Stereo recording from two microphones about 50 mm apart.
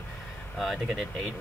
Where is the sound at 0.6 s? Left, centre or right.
Centre.